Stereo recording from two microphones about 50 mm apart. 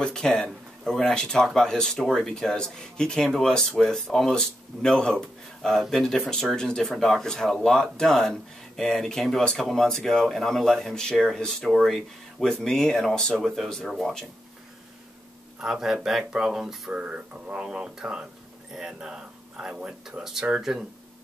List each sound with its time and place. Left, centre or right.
0.0 s speech: centre
13.8 s speech: centre
15.6 s speech: centre
16.9 s speech: right; by 20.5 s centre